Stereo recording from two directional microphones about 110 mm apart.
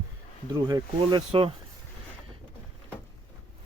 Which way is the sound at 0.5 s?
40° right (ahead or behind).